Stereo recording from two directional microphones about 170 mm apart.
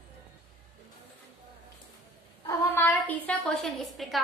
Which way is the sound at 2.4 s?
15° left (ahead or behind).